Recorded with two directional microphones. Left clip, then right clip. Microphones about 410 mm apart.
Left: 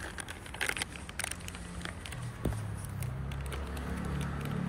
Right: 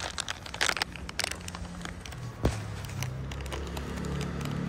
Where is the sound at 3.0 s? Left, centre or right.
Centre.